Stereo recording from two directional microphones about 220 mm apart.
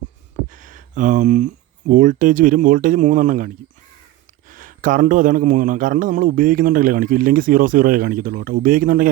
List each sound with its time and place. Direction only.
0.5 s a man's voice: 35° right (ahead or behind)